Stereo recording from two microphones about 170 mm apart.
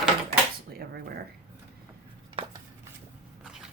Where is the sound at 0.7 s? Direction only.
65° right (ahead or behind).